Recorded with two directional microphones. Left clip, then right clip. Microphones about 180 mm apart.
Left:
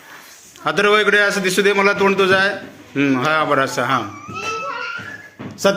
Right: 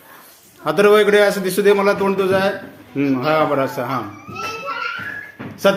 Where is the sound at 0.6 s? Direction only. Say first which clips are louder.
Right 2 dB; 5° right (ahead or behind).